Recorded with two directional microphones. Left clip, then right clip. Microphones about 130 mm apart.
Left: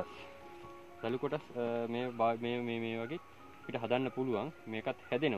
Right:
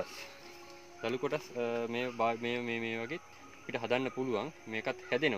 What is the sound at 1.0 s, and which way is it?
Speech, 15° left (ahead or behind).